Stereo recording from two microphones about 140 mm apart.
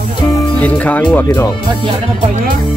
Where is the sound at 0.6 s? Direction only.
10° left (ahead or behind).